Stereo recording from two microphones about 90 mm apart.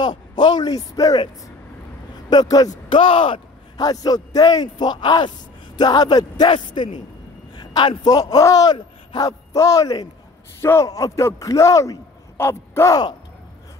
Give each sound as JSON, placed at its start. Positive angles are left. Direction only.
{"t": 0.0, "sound": "speech", "side_deg": 55}
{"t": 2.2, "sound": "a man's voice", "side_deg": 45}
{"t": 2.9, "sound": "speech", "side_deg": 75}
{"t": 3.7, "sound": "a man's voice", "side_deg": 45}
{"t": 10.6, "sound": "a man's voice", "side_deg": 30}
{"t": 10.9, "sound": "speech", "side_deg": 40}